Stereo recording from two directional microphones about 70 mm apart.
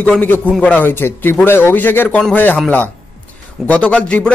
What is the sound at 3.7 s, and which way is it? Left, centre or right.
Speech, centre.